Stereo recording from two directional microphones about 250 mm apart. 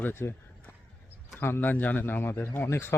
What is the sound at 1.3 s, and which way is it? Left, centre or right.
Speech, centre.